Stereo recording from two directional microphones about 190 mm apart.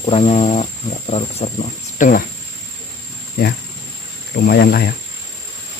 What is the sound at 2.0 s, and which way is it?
Speech, 45° left (ahead or behind).